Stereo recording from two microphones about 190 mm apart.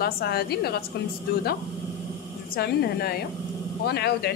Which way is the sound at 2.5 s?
55° left (ahead or behind).